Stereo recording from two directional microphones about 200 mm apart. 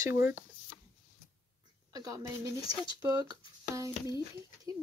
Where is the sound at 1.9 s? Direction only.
20° right (ahead or behind).